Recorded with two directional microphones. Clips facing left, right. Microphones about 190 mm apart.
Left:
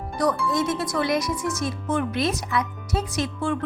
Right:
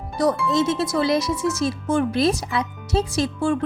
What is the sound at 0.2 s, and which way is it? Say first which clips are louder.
Speech: right 3 dB; 25° right (ahead or behind).